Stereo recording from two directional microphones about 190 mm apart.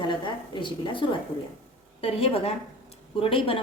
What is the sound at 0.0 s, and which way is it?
A woman's voice, 25° left (ahead or behind).